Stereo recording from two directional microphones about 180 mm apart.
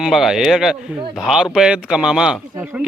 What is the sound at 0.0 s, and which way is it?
A man's voice, centre (ahead or behind).